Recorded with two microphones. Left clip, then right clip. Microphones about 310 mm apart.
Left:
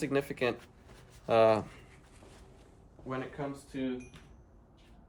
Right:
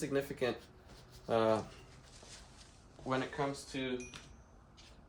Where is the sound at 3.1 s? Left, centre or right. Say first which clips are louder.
Right 2 dB; centre.